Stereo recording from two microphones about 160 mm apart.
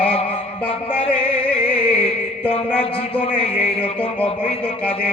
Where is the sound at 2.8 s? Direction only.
35° left (ahead or behind).